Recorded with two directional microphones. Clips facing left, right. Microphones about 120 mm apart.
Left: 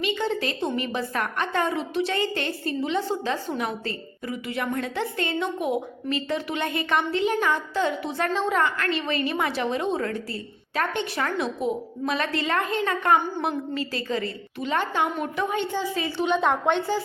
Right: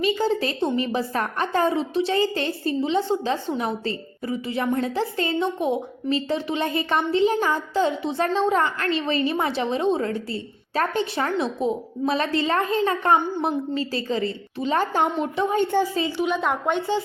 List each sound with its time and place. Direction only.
0.0 s a woman's voice: 35° right (ahead or behind)
15.5 s a woman's voice: 45° right (ahead or behind)
16.2 s a woman's voice: 5° right (ahead or behind)